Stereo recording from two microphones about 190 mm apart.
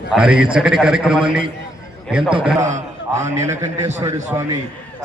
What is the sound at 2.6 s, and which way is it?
Speech, 40° right (ahead or behind).